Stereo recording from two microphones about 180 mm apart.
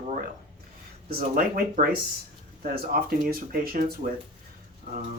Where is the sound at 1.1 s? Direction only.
55° right (ahead or behind).